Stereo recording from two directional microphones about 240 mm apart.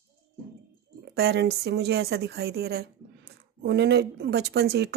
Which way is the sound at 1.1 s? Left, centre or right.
Right.